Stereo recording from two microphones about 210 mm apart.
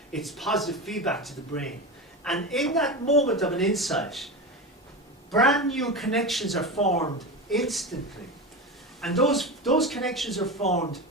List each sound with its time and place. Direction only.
0.1 s a woman's voice: centre (ahead or behind)
5.3 s a woman's voice: centre (ahead or behind)
6.7 s speech: 30° left (ahead or behind)
7.2 s speech: centre (ahead or behind)
9.0 s a woman's voice: centre (ahead or behind)
10.6 s speech: 30° left (ahead or behind)